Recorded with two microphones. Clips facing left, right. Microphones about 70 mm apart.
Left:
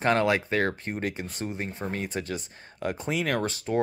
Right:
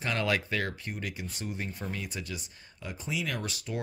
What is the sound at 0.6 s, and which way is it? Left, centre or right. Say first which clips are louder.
Speech: left 7 dB; left.